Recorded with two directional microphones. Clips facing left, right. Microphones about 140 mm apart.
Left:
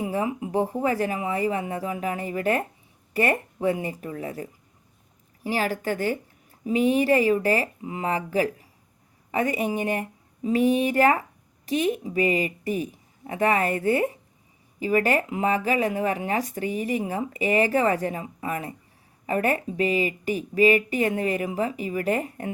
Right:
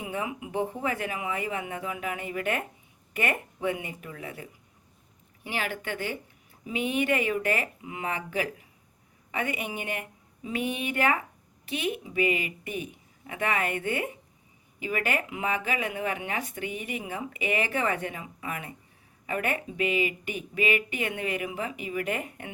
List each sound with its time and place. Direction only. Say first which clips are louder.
0.0 s speech: left 7 dB; 35° left (ahead or behind)